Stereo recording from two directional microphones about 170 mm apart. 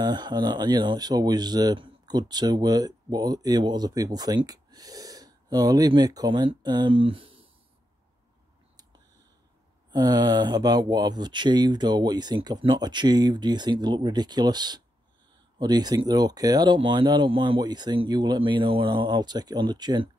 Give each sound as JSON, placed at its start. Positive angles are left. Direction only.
{"t": 0.0, "sound": "speech", "side_deg": -25}
{"t": 9.8, "sound": "speech", "side_deg": -25}